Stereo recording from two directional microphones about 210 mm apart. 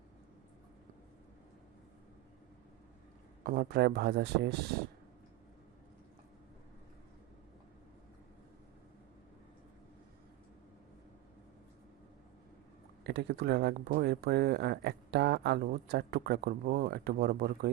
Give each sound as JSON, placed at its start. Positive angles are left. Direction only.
{"t": 3.4, "sound": "speech", "side_deg": -45}
{"t": 13.1, "sound": "speech", "side_deg": -50}